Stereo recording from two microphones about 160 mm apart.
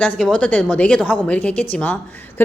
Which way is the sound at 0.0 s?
5° left (ahead or behind).